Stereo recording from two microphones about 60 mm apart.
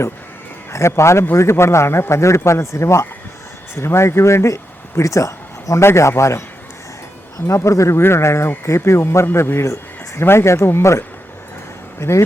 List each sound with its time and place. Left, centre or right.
0.7 s a man's voice: left
5.8 s a man's voice: left
7.4 s a man's voice: left